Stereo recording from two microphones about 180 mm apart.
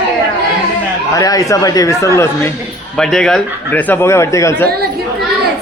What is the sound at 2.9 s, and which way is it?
Speech, 5° left (ahead or behind).